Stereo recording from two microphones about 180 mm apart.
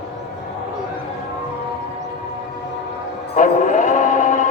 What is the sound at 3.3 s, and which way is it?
Music, 45° left (ahead or behind).